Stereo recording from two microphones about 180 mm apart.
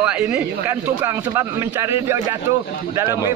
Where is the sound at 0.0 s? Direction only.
5° right (ahead or behind).